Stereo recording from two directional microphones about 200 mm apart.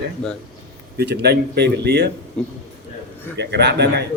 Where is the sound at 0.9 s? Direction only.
55° right (ahead or behind).